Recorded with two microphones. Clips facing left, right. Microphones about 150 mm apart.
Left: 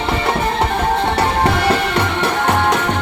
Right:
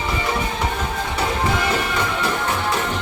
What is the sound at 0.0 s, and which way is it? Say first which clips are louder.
Music: left 5 dB; 70° left (ahead or behind).